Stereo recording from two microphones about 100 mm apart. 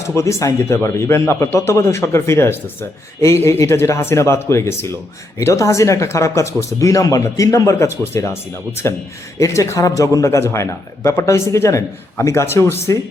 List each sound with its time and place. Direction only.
0.1 s speech: 30° left (ahead or behind)